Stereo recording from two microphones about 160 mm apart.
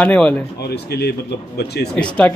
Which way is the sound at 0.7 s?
90° left.